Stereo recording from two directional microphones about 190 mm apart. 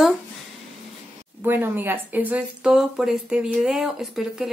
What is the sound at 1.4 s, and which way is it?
Speech, 10° right (ahead or behind).